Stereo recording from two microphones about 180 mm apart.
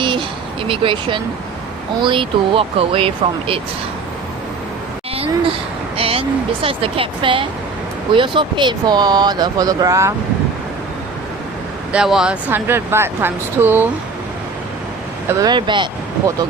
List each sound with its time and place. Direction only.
0.0 s a sound: 25° right (ahead or behind)
0.7 s speech: 30° right (ahead or behind)
5.1 s speech: 30° right (ahead or behind)
11.9 s speech: 5° right (ahead or behind)
15.3 s speech: 20° right (ahead or behind)